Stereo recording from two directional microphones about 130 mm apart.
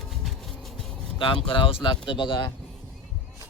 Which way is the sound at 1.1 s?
40° left (ahead or behind).